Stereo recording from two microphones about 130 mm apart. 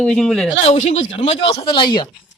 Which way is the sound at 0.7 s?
60° left (ahead or behind).